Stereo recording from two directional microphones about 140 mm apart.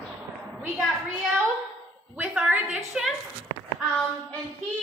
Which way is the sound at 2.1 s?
10° right (ahead or behind).